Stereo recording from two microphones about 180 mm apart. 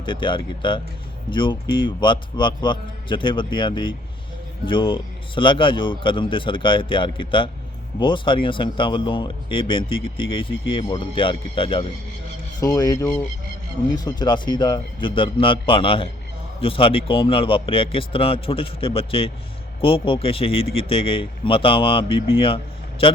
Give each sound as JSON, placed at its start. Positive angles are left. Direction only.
{"t": 0.0, "sound": "speech", "side_deg": 25}